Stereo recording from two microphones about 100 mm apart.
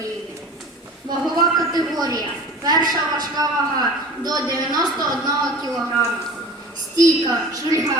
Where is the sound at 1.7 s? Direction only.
40° right (ahead or behind).